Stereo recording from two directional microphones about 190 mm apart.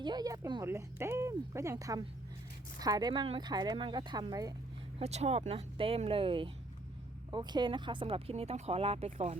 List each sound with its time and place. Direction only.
0.0 s speech: 20° right (ahead or behind)
4.9 s speech: 35° right (ahead or behind)